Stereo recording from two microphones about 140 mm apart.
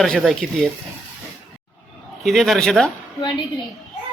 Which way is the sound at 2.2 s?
Centre (ahead or behind).